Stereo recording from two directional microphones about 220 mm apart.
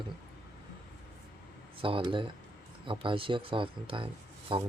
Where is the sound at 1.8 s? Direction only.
25° right (ahead or behind).